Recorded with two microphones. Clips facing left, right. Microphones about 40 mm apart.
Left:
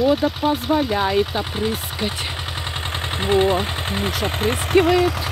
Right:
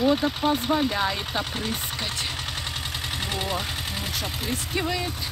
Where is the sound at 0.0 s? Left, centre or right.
Centre.